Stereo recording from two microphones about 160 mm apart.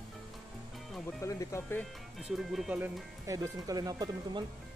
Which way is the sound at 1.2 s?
20° left (ahead or behind).